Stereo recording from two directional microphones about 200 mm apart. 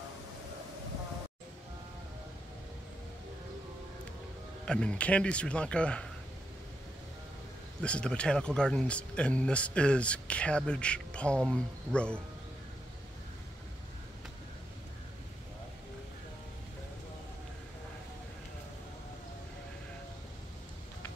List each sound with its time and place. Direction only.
4.6 s speech: 5° left (ahead or behind)
7.8 s speech: 5° left (ahead or behind)